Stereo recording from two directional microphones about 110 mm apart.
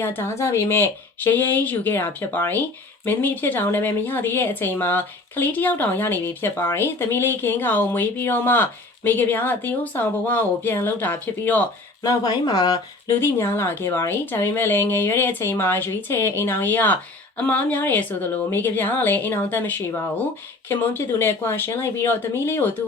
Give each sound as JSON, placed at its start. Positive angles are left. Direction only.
{"t": 0.0, "sound": "speech", "side_deg": 20}
{"t": 12.0, "sound": "speech", "side_deg": 40}
{"t": 13.1, "sound": "speech", "side_deg": 20}